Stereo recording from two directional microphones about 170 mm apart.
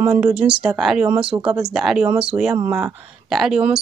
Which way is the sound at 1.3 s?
20° right (ahead or behind).